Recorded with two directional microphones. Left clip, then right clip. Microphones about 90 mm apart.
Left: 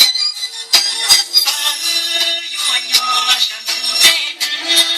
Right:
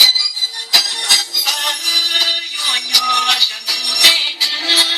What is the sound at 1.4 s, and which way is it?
Music, 35° right (ahead or behind).